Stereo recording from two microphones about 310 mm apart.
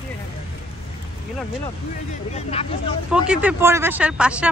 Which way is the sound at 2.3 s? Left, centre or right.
Centre.